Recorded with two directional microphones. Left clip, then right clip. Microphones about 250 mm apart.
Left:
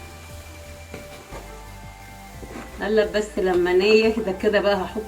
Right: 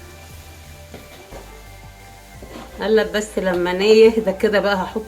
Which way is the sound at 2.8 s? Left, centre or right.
Right.